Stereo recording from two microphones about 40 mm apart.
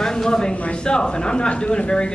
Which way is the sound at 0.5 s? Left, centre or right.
Left.